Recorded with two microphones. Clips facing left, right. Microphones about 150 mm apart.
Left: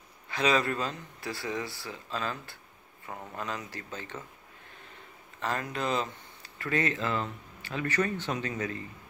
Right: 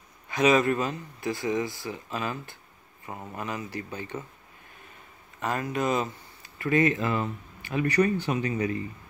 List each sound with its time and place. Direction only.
0.3 s speech: 15° right (ahead or behind)
5.4 s speech: 15° right (ahead or behind)